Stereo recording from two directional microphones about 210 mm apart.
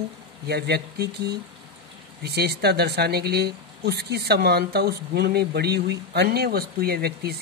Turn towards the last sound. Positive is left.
turn(degrees=-50)  # may be behind; listen again after turning